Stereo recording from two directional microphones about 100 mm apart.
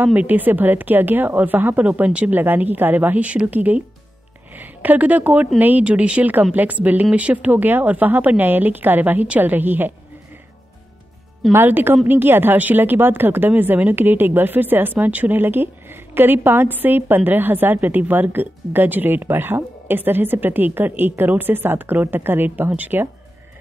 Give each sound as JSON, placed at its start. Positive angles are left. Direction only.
{"t": 0.0, "sound": "a woman's voice", "side_deg": -15}
{"t": 11.5, "sound": "a woman's voice", "side_deg": -20}